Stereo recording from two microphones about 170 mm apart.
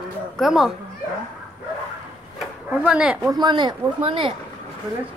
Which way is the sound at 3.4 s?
25° right (ahead or behind).